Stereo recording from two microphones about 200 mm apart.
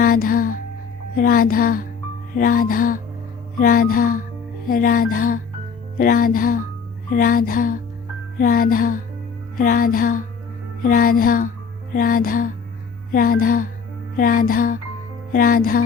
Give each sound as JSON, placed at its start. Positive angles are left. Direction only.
{"t": 0.0, "sound": "music", "side_deg": 45}
{"t": 1.1, "sound": "speech", "side_deg": 45}